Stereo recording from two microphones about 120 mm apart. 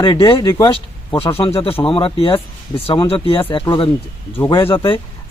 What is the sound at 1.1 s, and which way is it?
Speech, 50° left (ahead or behind).